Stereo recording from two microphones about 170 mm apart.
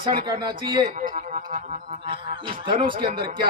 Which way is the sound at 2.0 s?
30° right (ahead or behind).